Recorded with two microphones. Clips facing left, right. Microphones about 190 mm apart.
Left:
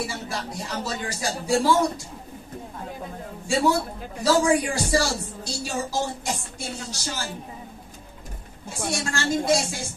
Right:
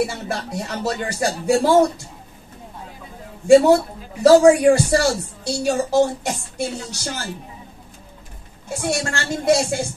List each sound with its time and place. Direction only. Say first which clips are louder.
0.0 s speech: right 7 dB; 60° right (ahead or behind)
3.4 s a man's voice: right 11 dB; 60° right (ahead or behind)
8.8 s speech: right 3 dB; 60° right (ahead or behind)